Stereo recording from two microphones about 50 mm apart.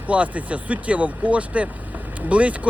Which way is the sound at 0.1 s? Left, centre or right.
Right.